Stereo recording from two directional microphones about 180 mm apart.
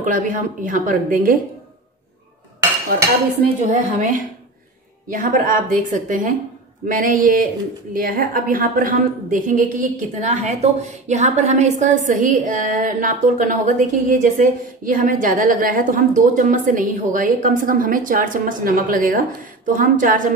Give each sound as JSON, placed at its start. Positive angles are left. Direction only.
{"t": 0.0, "sound": "a woman's voice", "side_deg": -45}
{"t": 3.6, "sound": "a woman's voice", "side_deg": -45}